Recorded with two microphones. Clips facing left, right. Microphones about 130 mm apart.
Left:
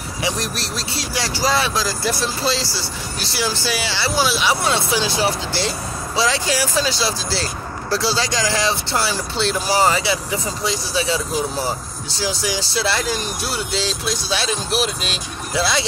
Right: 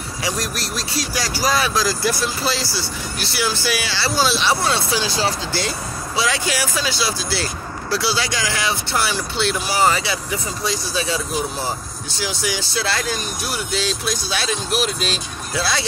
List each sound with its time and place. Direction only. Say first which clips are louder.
0.2 s speech: left 1 dB; 25° left (ahead or behind)
12.2 s speech: left 2 dB; 35° left (ahead or behind)